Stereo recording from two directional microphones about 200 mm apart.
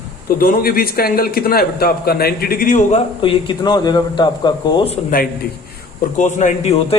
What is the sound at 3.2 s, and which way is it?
Speech, 25° left (ahead or behind).